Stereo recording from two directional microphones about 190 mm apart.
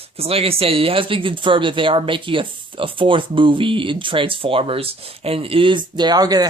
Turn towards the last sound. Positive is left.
turn(degrees=-20)  # may be behind; listen again after turning